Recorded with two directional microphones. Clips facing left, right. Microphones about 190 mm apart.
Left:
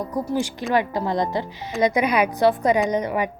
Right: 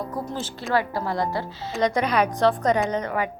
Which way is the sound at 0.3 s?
15° left (ahead or behind).